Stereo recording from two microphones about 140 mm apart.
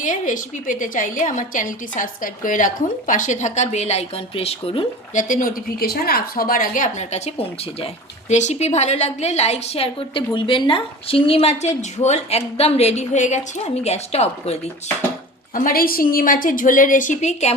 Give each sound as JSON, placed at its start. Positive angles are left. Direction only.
{"t": 0.0, "sound": "a woman's voice", "side_deg": 70}
{"t": 5.1, "sound": "a woman's voice", "side_deg": 75}
{"t": 8.3, "sound": "a woman's voice", "side_deg": 55}
{"t": 15.5, "sound": "a woman's voice", "side_deg": 80}